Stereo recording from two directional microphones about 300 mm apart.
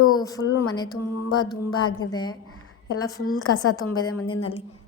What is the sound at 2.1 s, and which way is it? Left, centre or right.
A woman's voice, centre.